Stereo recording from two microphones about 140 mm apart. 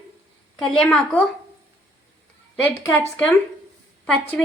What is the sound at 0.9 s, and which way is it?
Speech, 10° left (ahead or behind).